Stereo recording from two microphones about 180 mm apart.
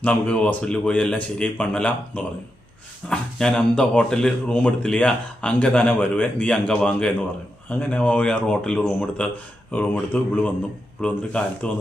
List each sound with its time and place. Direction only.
0.0 s a man's voice: 5° left (ahead or behind)